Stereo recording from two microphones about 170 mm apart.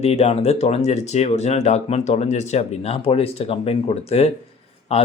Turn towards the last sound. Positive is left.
turn(degrees=35)  # may be behind; listen again after turning